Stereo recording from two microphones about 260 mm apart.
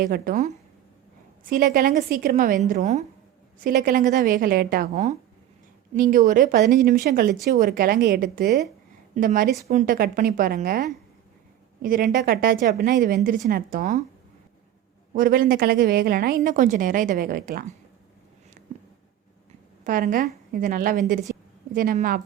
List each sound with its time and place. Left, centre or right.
0.0 s a woman's voice: right
15.1 s speech: right
19.8 s a woman's voice: right
21.3 s a sound: right
21.7 s speech: right